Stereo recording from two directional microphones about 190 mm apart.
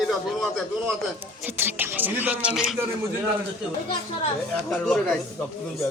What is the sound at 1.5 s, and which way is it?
A man's voice, 10° right (ahead or behind).